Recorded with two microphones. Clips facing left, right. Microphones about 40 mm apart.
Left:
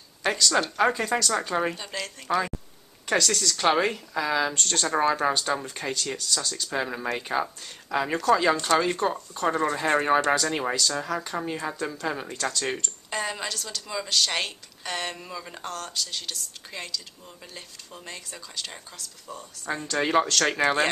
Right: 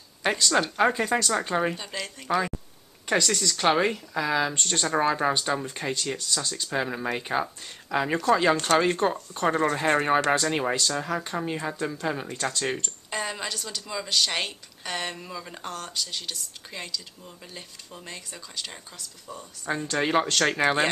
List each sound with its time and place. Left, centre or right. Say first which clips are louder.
0.2 s a woman's voice: even; centre
9.8 s a woman's voice: even; centre